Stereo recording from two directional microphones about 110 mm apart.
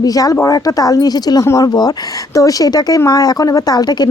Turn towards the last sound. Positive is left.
turn(degrees=40)  # may be behind; listen again after turning